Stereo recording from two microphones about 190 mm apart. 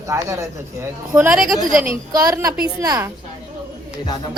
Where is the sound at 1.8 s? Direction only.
15° right (ahead or behind).